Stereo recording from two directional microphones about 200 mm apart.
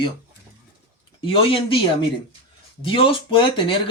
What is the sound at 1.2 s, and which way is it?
Speech, 25° left (ahead or behind).